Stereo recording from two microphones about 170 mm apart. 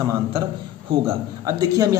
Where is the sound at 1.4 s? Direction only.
20° right (ahead or behind).